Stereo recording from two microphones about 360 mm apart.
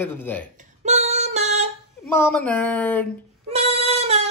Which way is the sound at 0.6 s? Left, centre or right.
Centre.